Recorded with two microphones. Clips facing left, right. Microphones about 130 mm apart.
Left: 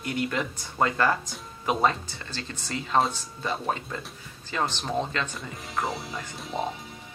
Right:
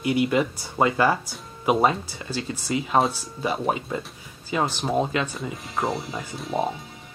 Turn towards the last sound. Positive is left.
turn(degrees=0)  # may be behind; listen again after turning